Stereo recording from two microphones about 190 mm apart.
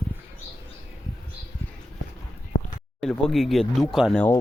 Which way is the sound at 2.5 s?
85° left.